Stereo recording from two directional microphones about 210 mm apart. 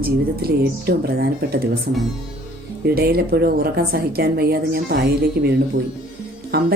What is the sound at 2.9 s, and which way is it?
A woman's voice, 45° right (ahead or behind).